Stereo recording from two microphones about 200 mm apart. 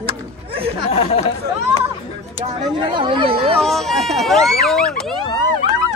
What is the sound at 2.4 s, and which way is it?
Speech, 25° right (ahead or behind).